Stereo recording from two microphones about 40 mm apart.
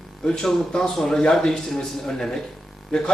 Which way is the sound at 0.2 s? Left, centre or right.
Centre.